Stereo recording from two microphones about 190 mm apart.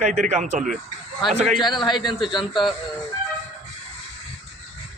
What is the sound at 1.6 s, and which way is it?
Speech, 25° left (ahead or behind).